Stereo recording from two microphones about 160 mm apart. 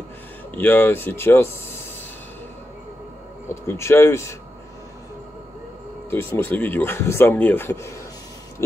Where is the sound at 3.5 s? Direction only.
15° left (ahead or behind).